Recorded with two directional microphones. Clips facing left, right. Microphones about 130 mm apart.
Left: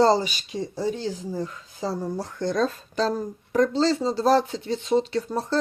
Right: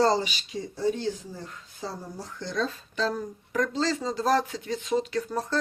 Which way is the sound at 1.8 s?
80° left.